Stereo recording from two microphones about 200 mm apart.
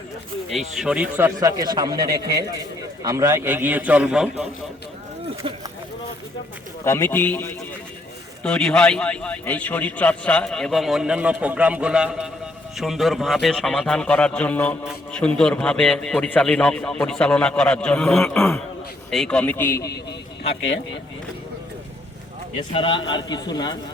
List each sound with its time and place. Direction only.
0.5 s a man's voice: 5° right (ahead or behind); by 2.0 s 20° right (ahead or behind)
3.0 s a man's voice: 15° right (ahead or behind)
6.8 s a man's voice: 10° left (ahead or behind)
22.7 s a man's voice: 25° left (ahead or behind)